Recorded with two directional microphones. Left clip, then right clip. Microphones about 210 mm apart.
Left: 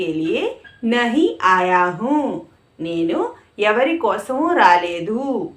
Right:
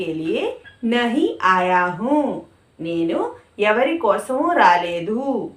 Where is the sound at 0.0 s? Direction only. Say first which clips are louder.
Left 2 dB; 20° left (ahead or behind).